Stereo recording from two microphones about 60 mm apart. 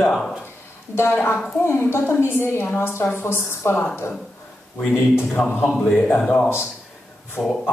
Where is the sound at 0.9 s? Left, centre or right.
Left.